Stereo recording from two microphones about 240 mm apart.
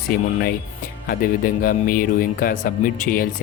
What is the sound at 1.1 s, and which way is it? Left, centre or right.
Speech, left.